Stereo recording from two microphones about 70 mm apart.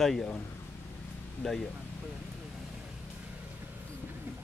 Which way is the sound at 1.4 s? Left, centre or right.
Centre.